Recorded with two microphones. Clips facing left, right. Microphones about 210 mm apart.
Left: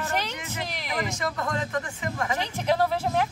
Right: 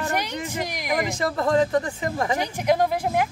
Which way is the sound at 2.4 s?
15° right (ahead or behind).